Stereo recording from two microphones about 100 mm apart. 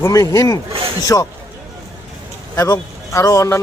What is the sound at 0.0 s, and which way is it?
A man's voice, 30° left (ahead or behind).